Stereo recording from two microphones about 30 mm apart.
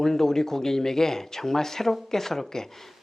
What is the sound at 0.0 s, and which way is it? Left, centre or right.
Speech, centre.